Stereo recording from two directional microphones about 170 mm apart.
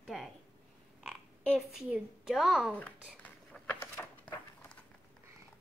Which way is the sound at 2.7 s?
10° left (ahead or behind).